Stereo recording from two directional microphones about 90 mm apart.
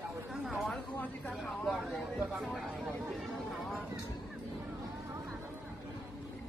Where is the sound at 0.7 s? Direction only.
15° left (ahead or behind).